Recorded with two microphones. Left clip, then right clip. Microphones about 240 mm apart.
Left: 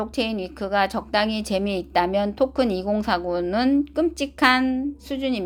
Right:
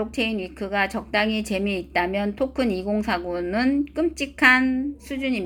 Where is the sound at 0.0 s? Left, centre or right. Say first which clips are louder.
Even; left.